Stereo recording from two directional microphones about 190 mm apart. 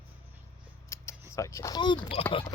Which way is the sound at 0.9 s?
15° left (ahead or behind).